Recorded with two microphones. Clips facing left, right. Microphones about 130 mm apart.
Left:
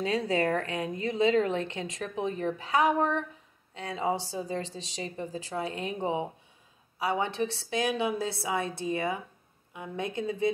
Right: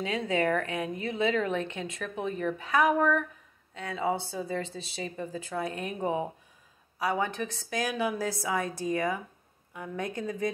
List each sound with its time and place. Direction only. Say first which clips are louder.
0.0 s a woman's voice: left 1 dB; 35° left (ahead or behind)